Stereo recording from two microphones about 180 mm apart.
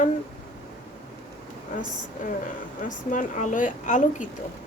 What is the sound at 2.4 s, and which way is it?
A woman's voice, 45° left (ahead or behind).